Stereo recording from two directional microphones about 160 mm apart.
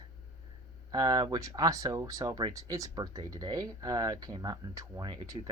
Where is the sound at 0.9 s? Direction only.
25° right (ahead or behind).